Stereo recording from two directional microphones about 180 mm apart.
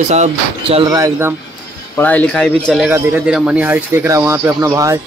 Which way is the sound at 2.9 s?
10° right (ahead or behind).